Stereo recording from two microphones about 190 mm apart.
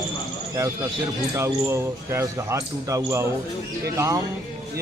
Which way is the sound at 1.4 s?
15° right (ahead or behind).